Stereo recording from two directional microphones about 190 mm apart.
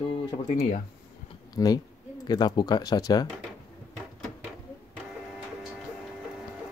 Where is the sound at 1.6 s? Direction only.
20° left (ahead or behind).